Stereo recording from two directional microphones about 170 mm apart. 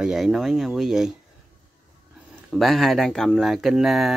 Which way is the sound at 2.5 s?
Centre (ahead or behind).